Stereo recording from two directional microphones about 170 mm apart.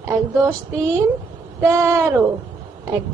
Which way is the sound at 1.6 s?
15° right (ahead or behind).